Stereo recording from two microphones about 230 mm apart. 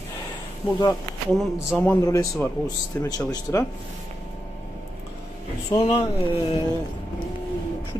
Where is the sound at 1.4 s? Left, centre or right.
Centre.